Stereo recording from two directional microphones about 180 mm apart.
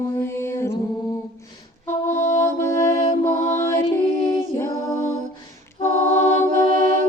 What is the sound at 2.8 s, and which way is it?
Mantra, 15° left (ahead or behind).